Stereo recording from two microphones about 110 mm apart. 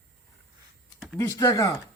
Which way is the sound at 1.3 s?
30° left (ahead or behind).